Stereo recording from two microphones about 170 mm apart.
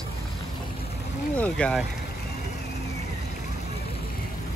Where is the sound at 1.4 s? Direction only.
5° left (ahead or behind).